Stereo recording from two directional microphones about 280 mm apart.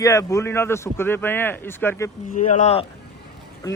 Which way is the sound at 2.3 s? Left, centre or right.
Left.